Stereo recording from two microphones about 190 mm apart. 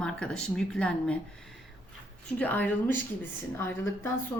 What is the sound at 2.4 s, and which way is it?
Speech, 10° left (ahead or behind).